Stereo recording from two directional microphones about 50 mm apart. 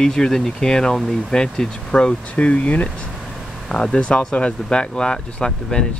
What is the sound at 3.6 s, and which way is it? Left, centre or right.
Speech, centre.